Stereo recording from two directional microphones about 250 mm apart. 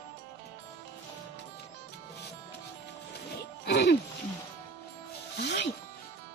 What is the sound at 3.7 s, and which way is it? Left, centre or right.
Music, left.